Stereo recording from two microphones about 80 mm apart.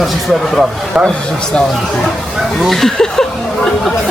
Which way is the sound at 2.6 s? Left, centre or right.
Centre.